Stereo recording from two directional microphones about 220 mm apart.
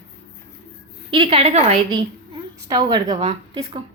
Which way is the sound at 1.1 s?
25° right (ahead or behind).